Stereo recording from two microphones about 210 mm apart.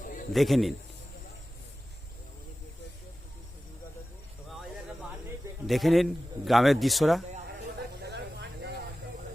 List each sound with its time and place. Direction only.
0.3 s a man's voice: centre (ahead or behind)
5.6 s a man's voice: centre (ahead or behind)
7.4 s snake: 50° right (ahead or behind)